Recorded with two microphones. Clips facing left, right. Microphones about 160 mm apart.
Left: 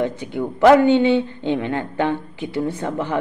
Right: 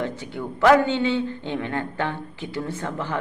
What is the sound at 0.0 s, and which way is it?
Speech, 15° left (ahead or behind).